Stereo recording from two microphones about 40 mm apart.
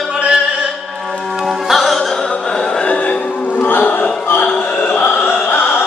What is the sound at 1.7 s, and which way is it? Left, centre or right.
Music, centre.